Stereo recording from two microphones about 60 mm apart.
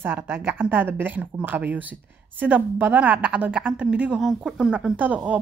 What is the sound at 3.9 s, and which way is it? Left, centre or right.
Speech, centre.